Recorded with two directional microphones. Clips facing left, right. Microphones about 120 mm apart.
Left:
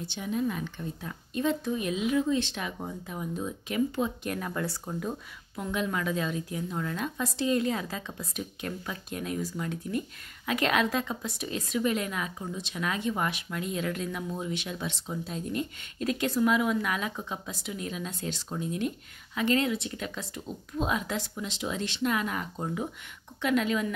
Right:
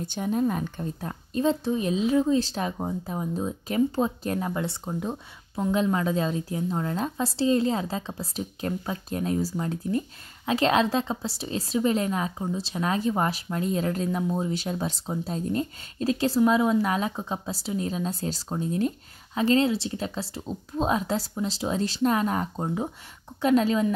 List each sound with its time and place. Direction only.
0.0 s a woman's voice: 45° right (ahead or behind)